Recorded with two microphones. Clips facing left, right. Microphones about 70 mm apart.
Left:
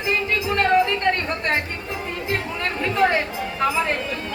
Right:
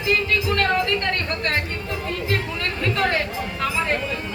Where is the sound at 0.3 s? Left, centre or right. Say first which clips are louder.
Left 1 dB; centre.